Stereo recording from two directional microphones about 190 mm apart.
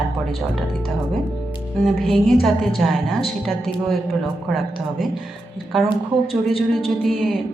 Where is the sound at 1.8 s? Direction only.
Centre (ahead or behind).